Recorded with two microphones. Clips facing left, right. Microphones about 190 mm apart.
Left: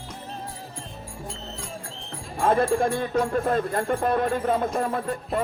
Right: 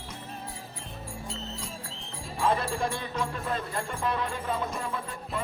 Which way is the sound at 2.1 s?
50° left (ahead or behind).